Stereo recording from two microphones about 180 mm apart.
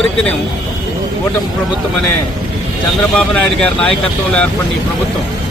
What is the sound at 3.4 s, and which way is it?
Speech, 5° left (ahead or behind).